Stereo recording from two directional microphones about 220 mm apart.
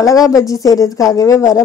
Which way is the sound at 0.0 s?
15° left (ahead or behind).